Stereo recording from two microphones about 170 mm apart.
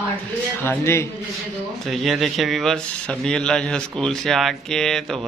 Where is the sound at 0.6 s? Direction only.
15° left (ahead or behind).